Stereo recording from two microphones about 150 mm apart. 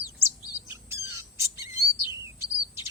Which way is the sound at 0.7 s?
15° right (ahead or behind).